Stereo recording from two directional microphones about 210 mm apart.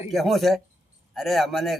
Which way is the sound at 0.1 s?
Centre (ahead or behind).